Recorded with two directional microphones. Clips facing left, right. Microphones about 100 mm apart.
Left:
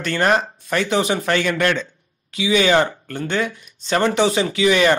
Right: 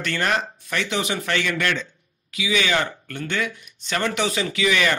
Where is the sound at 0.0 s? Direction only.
35° left (ahead or behind).